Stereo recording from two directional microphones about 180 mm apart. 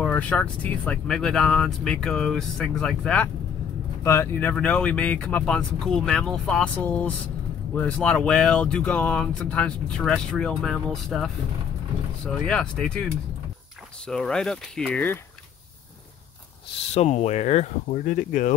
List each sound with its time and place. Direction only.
0.0 s speech: 5° left (ahead or behind)
4.0 s speech: 15° left (ahead or behind)
12.4 s speech: 5° left (ahead or behind)
16.8 s speech: 35° left (ahead or behind)